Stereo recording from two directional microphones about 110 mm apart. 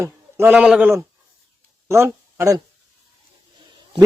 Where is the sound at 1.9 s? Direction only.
25° right (ahead or behind).